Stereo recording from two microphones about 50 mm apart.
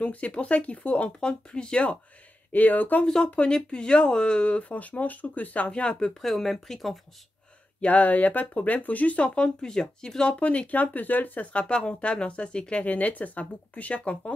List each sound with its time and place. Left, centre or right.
0.0 s speech: left
2.5 s speech: left
3.3 s speech: left
5.7 s speech: left
6.2 s speech: centre
7.8 s speech: left; by 10.3 s centre
10.4 s speech: left
11.6 s speech: left